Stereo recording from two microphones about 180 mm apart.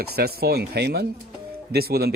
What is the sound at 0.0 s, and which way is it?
Speech, 60° right (ahead or behind).